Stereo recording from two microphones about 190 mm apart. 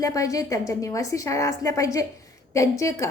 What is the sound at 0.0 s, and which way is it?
A woman's voice, 15° left (ahead or behind).